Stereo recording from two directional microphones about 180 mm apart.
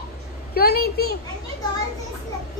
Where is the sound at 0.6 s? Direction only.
60° left (ahead or behind).